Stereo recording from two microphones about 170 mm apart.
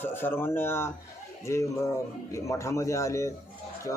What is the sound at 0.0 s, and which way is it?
A man's voice, 10° left (ahead or behind).